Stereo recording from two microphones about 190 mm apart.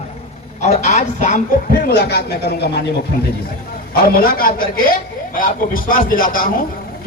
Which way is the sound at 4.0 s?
50° left (ahead or behind).